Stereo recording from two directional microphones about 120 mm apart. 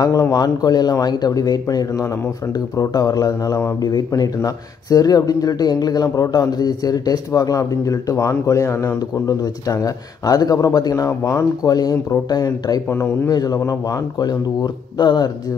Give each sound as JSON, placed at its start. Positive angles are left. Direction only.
{"t": 0.0, "sound": "speech", "side_deg": 30}
{"t": 12.9, "sound": "speech", "side_deg": 20}
{"t": 13.3, "sound": "speech", "side_deg": 30}